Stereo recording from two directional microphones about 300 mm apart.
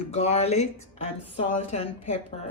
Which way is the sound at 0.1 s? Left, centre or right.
Left.